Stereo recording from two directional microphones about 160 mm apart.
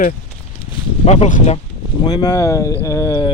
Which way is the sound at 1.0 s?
45° left (ahead or behind).